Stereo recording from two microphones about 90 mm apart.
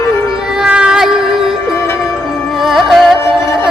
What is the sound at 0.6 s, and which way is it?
Cat, 10° right (ahead or behind).